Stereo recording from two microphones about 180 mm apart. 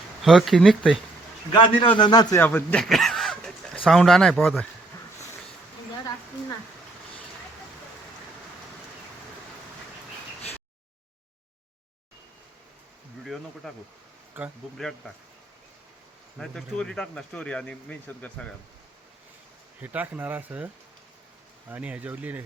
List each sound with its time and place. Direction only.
0.2 s speech: centre (ahead or behind)
1.5 s a man's voice: 25° left (ahead or behind)
2.4 s speech: 10° left (ahead or behind)
13.2 s a sound: centre (ahead or behind)
14.4 s speech: 10° right (ahead or behind)
14.8 s speech: centre (ahead or behind)
16.4 s speech: 5° left (ahead or behind)
19.8 s speech: 10° right (ahead or behind)
21.7 s speech: 10° right (ahead or behind)